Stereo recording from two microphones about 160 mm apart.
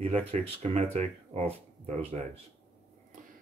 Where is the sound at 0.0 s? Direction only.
40° right (ahead or behind).